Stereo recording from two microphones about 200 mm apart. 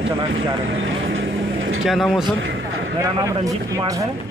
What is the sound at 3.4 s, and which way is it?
Speech, 15° right (ahead or behind).